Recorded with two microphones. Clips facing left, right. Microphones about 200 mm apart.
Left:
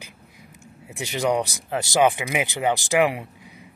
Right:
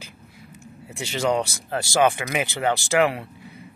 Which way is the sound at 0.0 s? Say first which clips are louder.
Right 2 dB; 15° left (ahead or behind).